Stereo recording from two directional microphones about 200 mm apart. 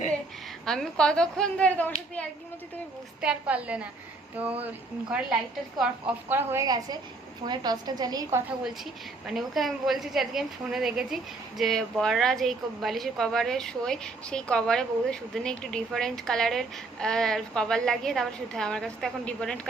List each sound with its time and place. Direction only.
0.6 s a woman's voice: 5° left (ahead or behind)
3.2 s a woman's voice: 5° right (ahead or behind)
5.8 s a woman's voice: 10° right (ahead or behind)
8.4 s a woman's voice: centre (ahead or behind)